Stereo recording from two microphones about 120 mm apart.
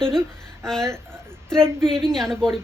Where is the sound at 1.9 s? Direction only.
5° left (ahead or behind).